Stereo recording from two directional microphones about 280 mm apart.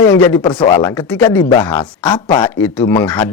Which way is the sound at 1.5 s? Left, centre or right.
Centre.